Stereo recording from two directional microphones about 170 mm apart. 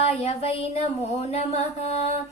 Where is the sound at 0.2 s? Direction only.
35° left (ahead or behind).